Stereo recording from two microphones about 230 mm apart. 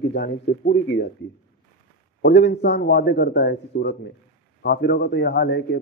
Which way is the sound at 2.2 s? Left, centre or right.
Left.